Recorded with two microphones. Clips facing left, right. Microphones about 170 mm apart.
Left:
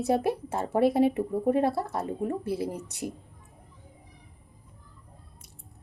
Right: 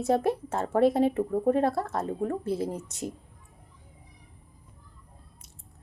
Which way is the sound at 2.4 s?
65° left (ahead or behind).